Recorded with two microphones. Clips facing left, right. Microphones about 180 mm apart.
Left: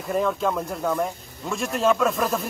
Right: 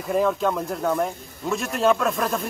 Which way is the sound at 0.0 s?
Centre (ahead or behind).